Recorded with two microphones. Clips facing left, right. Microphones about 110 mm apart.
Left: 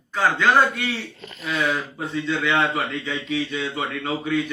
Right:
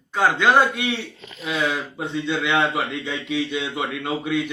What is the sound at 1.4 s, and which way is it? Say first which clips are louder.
Speech: even; 5° right (ahead or behind).